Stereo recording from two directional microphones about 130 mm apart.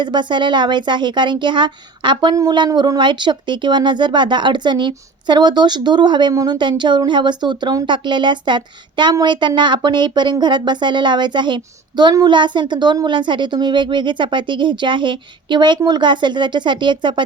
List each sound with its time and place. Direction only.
0.0 s speech: 35° right (ahead or behind)